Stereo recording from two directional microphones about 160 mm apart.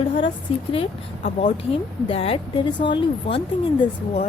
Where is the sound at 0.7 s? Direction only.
35° left (ahead or behind).